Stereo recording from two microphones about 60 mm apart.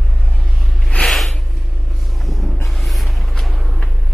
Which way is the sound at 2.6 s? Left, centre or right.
Centre.